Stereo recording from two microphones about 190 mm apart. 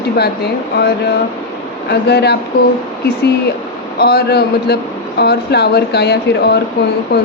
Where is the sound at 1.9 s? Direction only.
60° left (ahead or behind).